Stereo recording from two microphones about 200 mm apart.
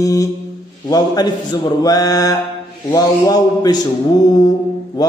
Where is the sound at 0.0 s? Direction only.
15° left (ahead or behind).